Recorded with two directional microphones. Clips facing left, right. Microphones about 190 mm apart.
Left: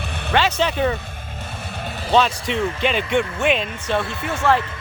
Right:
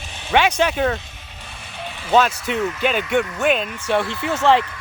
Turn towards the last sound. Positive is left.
turn(degrees=-20)  # may be behind; listen again after turning